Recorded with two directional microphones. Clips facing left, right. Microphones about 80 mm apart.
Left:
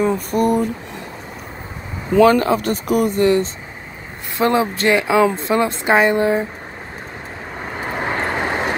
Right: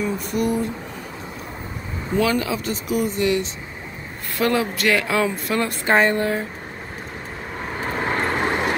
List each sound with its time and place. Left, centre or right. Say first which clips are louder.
0.0 s a sound: left 6 dB; left
2.1 s speech: left 8 dB; left
4.4 s speech: left 4 dB; left
7.8 s vehicle: left 1 dB; centre